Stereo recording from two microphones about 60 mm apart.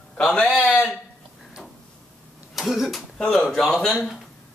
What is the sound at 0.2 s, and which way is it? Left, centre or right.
Speech, centre.